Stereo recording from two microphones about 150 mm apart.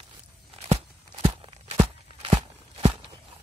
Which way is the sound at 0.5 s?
45° right (ahead or behind).